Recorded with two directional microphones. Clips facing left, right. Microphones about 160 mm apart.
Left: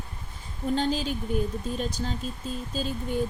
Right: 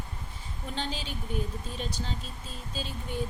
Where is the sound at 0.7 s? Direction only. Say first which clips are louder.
Left 9 dB; 45° left (ahead or behind).